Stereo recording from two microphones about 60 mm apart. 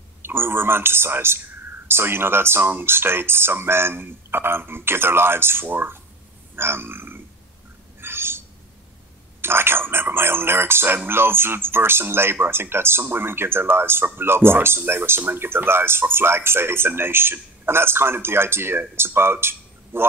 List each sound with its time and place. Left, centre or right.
0.2 s speech: right
6.5 s burping: right
8.0 s a sound: right
9.4 s speech: right